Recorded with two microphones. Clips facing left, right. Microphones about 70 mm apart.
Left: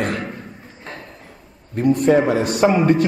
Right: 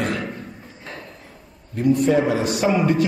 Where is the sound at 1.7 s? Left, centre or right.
Left.